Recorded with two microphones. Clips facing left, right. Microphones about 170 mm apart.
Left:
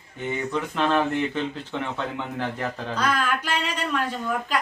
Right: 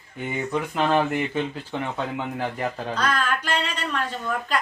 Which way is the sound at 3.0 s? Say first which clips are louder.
Left 1 dB; 10° left (ahead or behind).